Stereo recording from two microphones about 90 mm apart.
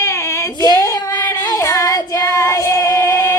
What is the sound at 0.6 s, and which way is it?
Child singing, 40° left (ahead or behind).